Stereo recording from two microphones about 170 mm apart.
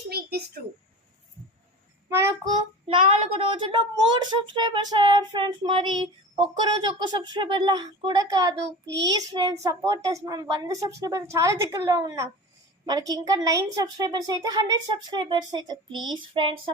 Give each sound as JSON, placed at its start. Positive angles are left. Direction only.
{"t": 0.1, "sound": "a sound", "side_deg": -70}
{"t": 2.0, "sound": "a child's voice", "side_deg": -15}
{"t": 2.8, "sound": "child singing", "side_deg": -35}
{"t": 3.6, "sound": "a child's voice", "side_deg": -25}
{"t": 16.1, "sound": "child singing", "side_deg": -30}